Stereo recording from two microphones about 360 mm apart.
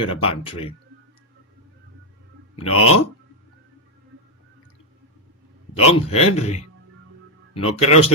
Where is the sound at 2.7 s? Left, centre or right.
Left.